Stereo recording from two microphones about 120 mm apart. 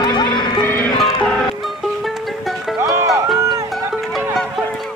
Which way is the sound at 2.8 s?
25° right (ahead or behind).